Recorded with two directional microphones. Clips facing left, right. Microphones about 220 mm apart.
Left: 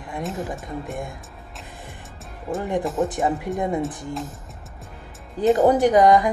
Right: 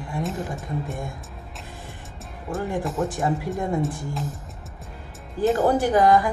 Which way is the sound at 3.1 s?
20° left (ahead or behind).